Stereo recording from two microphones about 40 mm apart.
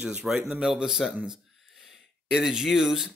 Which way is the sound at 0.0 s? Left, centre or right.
Right.